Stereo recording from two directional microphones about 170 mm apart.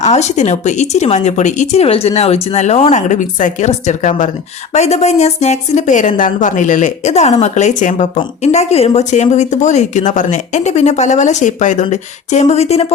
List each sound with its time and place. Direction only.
0.0 s speech: 40° left (ahead or behind)